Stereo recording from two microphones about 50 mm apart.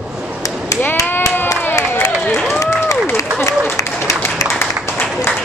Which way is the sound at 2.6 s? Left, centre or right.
Left.